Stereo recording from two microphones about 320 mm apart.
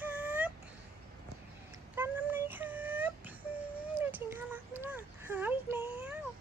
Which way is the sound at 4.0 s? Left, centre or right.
Centre.